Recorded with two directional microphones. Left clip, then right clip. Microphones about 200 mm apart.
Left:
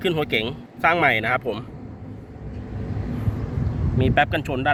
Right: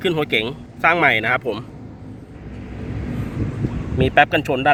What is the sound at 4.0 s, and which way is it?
Speech, 25° right (ahead or behind).